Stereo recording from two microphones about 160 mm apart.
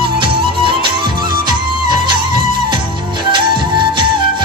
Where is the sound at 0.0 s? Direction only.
35° right (ahead or behind).